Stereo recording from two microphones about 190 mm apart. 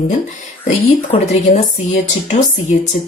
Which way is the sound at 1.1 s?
30° left (ahead or behind).